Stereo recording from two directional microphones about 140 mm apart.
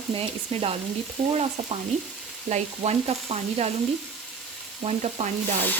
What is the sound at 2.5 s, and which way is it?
Frying, 50° right (ahead or behind).